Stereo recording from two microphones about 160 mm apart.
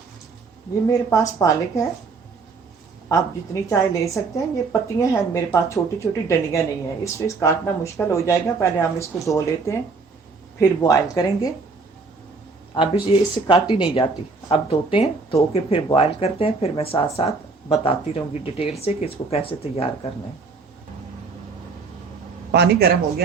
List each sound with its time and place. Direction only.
0.9 s a woman's voice: 20° left (ahead or behind)
3.1 s a woman's voice: 20° left (ahead or behind)
10.6 s a woman's voice: 20° left (ahead or behind)
12.7 s speech: 30° left (ahead or behind)
22.5 s speech: 90° right